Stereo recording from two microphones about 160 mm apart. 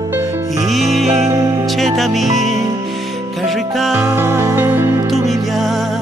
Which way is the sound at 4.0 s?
15° right (ahead or behind).